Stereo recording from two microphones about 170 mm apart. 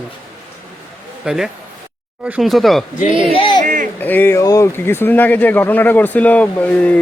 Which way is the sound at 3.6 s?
50° right (ahead or behind).